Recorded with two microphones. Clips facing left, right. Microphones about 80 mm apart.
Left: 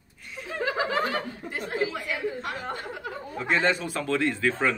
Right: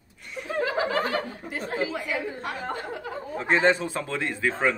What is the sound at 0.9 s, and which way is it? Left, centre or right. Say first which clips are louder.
Speech: right 1 dB; right.